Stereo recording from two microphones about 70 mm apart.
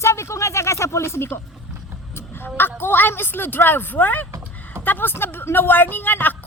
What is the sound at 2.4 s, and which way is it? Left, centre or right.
A woman's voice, left.